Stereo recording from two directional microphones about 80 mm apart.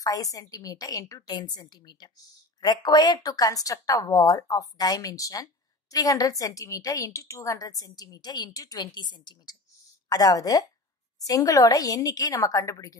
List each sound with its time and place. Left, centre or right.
0.0 s speech: left
1.3 s a woman's voice: left
8.9 s a woman's voice: left
10.0 s speech: left